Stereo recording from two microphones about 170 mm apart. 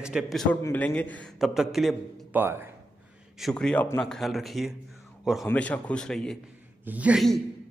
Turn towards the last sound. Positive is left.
turn(degrees=0)  # may be behind; listen again after turning